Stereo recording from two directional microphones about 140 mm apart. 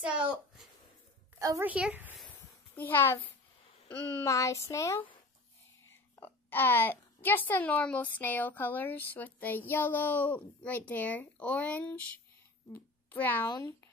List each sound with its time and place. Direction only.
0.0 s speech: 10° right (ahead or behind)
1.4 s a woman's voice: 25° right (ahead or behind)
1.7 s speech: 10° right (ahead or behind)
2.7 s a child's voice: 15° left (ahead or behind)
4.2 s a child's voice: 20° left (ahead or behind)
13.5 s speech: 30° left (ahead or behind)